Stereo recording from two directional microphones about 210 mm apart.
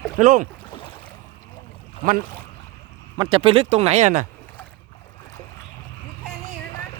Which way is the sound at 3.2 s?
25° right (ahead or behind).